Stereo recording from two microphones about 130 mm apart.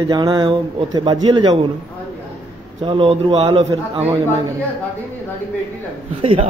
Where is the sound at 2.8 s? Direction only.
40° right (ahead or behind).